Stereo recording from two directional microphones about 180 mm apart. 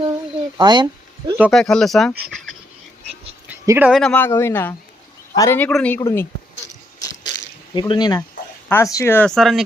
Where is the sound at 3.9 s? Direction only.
Centre (ahead or behind); by 5.6 s 20° left (ahead or behind).